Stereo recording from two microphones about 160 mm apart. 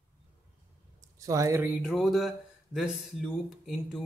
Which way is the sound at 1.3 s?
20° right (ahead or behind).